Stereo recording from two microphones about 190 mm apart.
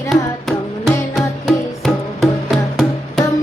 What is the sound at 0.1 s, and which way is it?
Music, centre (ahead or behind).